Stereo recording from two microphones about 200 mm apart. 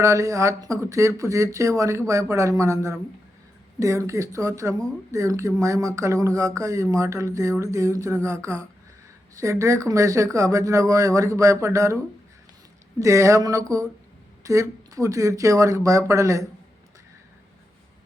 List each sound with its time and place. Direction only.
0.0 s speech: 15° right (ahead or behind)
13.0 s speech: 15° right (ahead or behind)